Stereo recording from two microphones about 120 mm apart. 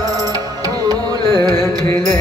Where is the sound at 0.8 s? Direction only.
35° right (ahead or behind).